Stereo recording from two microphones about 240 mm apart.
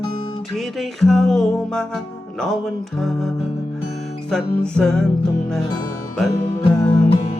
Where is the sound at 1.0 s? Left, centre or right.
Centre.